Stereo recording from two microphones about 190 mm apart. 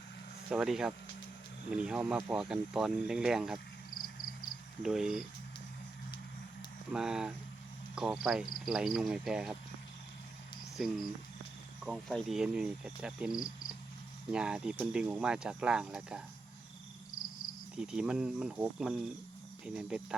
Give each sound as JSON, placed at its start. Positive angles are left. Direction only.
{"t": 0.5, "sound": "speech", "side_deg": -5}
{"t": 3.9, "sound": "a sound", "side_deg": 50}
{"t": 4.8, "sound": "speech", "side_deg": -5}
{"t": 6.9, "sound": "speech", "side_deg": -5}
{"t": 11.8, "sound": "speech", "side_deg": 0}
{"t": 17.7, "sound": "speech", "side_deg": -5}